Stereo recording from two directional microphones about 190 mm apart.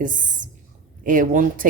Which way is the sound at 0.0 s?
45° right (ahead or behind).